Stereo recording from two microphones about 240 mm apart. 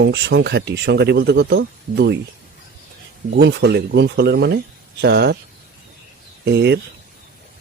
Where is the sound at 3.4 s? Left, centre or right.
Right.